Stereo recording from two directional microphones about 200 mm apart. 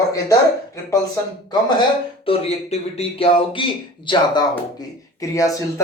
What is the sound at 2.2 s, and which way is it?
A man's voice, 30° left (ahead or behind).